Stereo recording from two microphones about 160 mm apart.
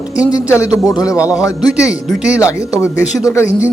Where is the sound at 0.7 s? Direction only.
25° left (ahead or behind).